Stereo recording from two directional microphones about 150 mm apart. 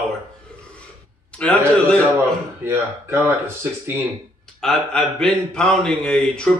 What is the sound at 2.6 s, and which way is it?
Speech, 15° right (ahead or behind).